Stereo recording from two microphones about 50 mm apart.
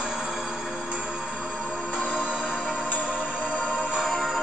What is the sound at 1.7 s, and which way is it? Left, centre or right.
Music, right.